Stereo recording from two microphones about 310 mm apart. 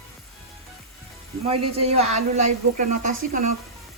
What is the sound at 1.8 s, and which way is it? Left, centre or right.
Speech, centre.